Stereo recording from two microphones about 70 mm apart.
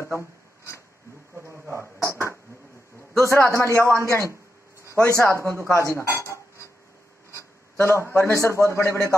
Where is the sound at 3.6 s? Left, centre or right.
Left.